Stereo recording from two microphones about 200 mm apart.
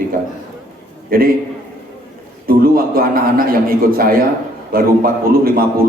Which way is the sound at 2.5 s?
45° right (ahead or behind).